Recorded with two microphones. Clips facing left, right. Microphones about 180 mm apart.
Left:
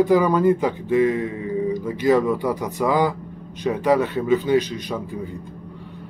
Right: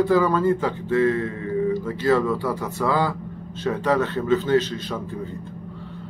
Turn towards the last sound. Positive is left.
turn(degrees=15)  # may be behind; listen again after turning